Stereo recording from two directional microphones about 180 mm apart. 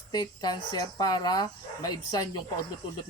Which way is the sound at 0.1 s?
20° left (ahead or behind).